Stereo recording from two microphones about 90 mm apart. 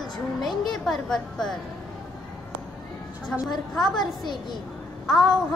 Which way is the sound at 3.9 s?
55° left (ahead or behind).